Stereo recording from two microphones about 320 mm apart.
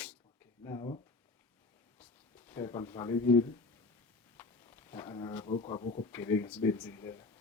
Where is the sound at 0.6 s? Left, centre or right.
Centre.